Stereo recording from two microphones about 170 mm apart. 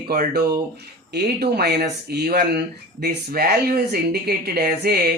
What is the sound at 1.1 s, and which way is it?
Speech, 70° right (ahead or behind).